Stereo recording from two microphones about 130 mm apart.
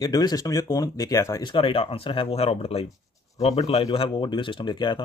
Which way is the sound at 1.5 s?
45° left (ahead or behind).